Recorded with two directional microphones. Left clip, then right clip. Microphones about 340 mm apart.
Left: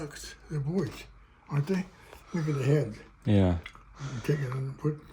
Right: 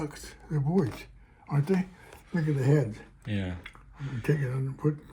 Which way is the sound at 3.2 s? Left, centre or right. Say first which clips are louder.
Left 9 dB; centre.